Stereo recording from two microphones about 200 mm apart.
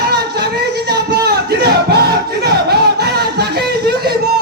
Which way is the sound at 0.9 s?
55° right (ahead or behind).